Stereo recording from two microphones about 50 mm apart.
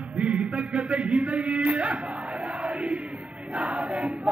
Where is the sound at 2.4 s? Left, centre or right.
Right.